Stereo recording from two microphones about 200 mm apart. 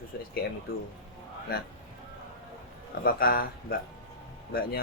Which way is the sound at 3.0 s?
45° left (ahead or behind).